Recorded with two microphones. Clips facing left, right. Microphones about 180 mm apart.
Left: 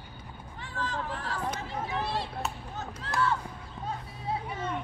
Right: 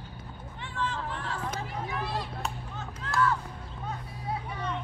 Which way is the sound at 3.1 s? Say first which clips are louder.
Right 2 dB; 30° left (ahead or behind).